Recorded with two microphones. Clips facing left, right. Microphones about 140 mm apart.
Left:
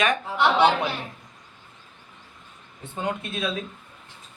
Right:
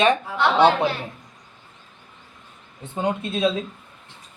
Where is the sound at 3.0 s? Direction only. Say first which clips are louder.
Right 6 dB; 20° right (ahead or behind).